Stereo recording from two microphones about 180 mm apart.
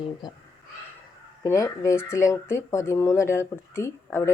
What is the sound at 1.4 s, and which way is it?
Speech, 15° left (ahead or behind).